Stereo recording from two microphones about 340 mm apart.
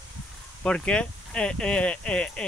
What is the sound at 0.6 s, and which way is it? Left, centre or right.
Speech, centre.